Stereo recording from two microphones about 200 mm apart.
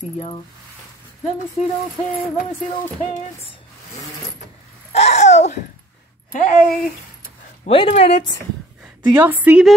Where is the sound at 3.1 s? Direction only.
30° left (ahead or behind).